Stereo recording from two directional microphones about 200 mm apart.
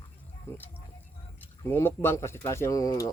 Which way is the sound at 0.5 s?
10° left (ahead or behind).